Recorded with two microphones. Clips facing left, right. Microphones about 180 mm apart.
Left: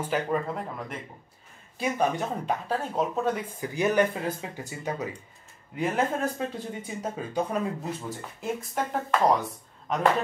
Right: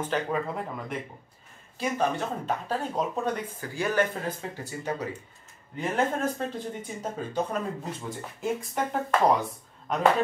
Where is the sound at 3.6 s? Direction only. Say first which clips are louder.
Left 3 dB; 20° left (ahead or behind).